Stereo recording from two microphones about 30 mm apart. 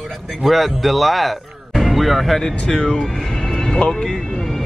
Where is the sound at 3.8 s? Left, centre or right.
Left.